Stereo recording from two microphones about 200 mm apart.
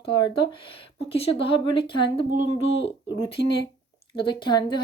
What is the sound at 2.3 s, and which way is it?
Speech, 40° right (ahead or behind).